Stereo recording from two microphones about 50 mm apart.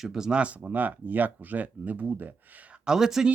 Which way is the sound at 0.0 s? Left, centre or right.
Centre.